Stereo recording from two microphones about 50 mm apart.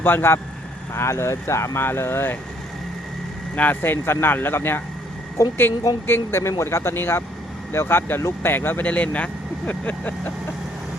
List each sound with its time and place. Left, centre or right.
0.0 s speech: left
0.9 s speech: left
1.8 s speech: left
3.5 s speech: left
3.8 s speech: left
6.3 s speech: left